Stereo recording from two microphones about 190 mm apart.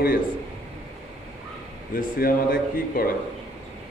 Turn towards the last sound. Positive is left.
turn(degrees=50)  # may be behind; listen again after turning